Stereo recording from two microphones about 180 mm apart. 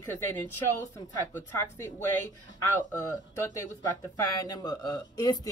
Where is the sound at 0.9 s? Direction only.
15° left (ahead or behind).